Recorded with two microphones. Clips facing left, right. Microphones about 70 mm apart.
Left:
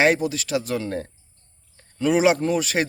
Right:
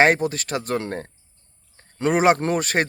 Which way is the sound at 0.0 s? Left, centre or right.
Right.